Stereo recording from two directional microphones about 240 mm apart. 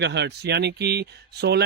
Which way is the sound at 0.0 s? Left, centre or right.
Right.